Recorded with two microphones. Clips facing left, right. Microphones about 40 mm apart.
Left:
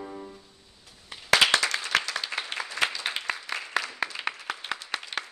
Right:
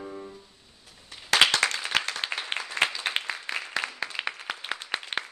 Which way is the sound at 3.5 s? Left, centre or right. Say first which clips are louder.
Right 1 dB; right.